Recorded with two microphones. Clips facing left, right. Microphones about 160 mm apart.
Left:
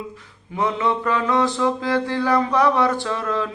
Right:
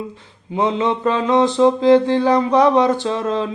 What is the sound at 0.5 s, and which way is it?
Mantra, 20° right (ahead or behind).